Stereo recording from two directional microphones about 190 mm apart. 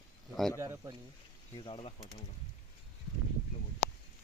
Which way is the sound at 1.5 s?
25° left (ahead or behind).